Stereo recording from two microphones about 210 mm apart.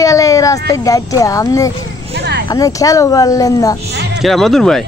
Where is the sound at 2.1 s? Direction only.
50° right (ahead or behind).